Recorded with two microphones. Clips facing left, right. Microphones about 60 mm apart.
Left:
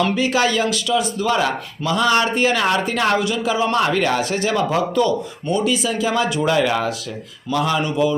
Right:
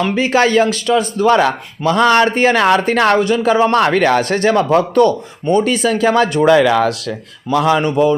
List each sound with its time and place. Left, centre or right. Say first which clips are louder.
0.2 s speech: right 6 dB; right
6.5 s speech: right 8 dB; right
7.5 s speech: right 6 dB; right